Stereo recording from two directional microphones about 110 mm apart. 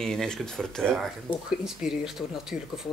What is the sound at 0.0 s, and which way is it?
Speech, 5° left (ahead or behind).